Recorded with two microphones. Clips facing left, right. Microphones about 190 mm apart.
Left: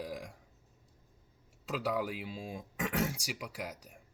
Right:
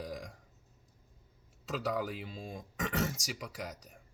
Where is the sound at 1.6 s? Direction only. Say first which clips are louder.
Left 1 dB; 5° left (ahead or behind).